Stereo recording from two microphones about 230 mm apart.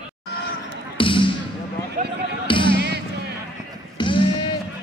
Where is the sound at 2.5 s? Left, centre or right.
Left.